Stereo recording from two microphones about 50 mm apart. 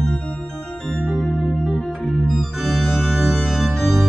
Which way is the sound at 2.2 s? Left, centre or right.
Centre.